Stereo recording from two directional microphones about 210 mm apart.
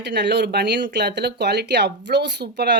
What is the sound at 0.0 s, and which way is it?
Speech, 55° right (ahead or behind).